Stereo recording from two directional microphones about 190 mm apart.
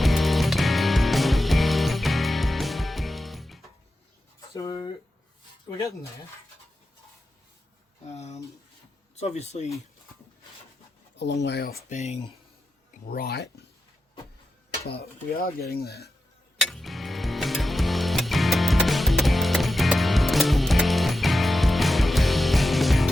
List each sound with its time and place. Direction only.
0.0 s music: centre (ahead or behind)
4.4 s a sound: 20° left (ahead or behind)
8.1 s speech: 35° left (ahead or behind)
11.2 s speech: 65° left (ahead or behind); by 12.3 s 35° left (ahead or behind)
13.1 s speech: 50° left (ahead or behind)
14.8 s speech: 55° left (ahead or behind)
16.6 s music: centre (ahead or behind)